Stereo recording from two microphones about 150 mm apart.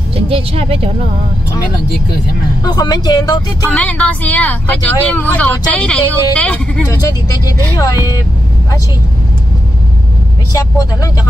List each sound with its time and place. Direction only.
0.1 s speech: 40° right (ahead or behind)
2.6 s speech: 25° left (ahead or behind)
3.7 s speech: 10° left (ahead or behind)
6.9 s speech: 25° left (ahead or behind)